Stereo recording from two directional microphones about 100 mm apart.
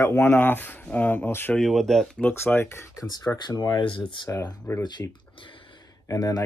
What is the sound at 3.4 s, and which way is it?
Speech, 45° left (ahead or behind).